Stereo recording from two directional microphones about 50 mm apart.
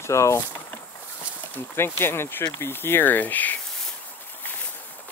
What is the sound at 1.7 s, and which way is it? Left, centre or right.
Speech, left.